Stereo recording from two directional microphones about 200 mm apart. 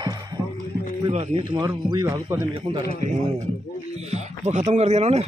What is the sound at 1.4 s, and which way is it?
Speech, 20° right (ahead or behind).